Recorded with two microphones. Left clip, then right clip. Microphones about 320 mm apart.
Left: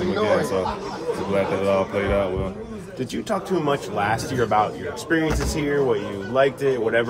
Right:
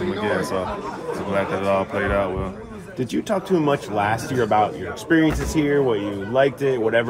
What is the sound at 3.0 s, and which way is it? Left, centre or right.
A man's voice, centre.